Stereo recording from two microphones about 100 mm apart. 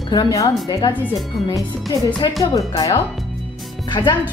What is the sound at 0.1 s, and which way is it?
Speech, 40° left (ahead or behind).